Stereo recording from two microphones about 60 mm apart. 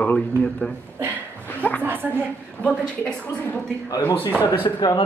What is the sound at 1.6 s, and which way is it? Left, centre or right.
Speech, left.